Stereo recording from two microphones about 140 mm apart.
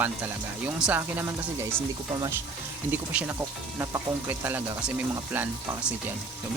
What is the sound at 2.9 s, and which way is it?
Speech, 15° right (ahead or behind).